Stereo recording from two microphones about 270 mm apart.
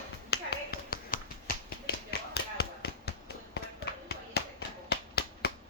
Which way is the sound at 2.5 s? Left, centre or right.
Left.